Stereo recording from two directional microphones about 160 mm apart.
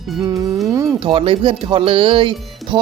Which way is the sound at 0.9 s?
35° right (ahead or behind).